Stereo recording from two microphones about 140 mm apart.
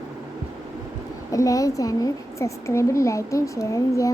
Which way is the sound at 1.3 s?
25° left (ahead or behind).